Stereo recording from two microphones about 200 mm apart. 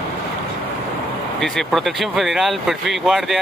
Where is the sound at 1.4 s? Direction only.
Centre (ahead or behind).